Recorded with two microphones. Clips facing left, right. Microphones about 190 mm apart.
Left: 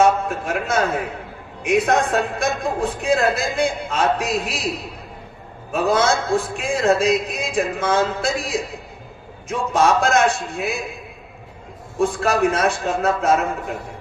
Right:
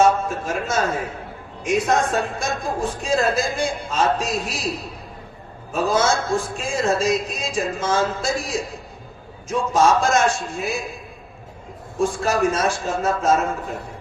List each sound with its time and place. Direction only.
0.0 s a man's voice: 60° left (ahead or behind)
5.7 s a man's voice: 60° left (ahead or behind)
10.3 s a man's voice: centre (ahead or behind)
11.9 s a man's voice: 60° left (ahead or behind)